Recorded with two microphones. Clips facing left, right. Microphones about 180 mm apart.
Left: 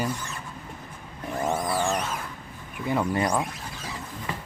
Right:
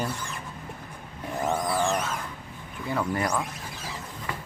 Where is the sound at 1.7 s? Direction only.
15° left (ahead or behind).